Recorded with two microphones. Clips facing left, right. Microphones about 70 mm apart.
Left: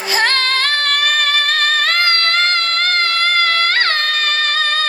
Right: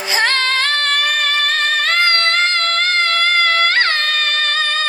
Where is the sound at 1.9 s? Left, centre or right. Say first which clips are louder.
Right 1 dB; right.